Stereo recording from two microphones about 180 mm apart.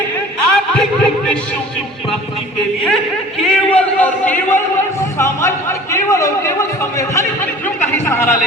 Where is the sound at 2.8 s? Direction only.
Centre (ahead or behind).